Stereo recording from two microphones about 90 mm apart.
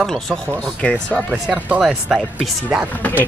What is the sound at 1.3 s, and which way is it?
Speech, 15° right (ahead or behind).